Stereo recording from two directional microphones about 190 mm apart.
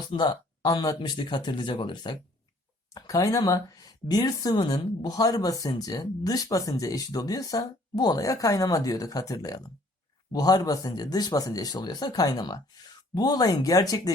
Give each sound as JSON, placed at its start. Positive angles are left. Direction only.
{"t": 0.0, "sound": "speech", "side_deg": 25}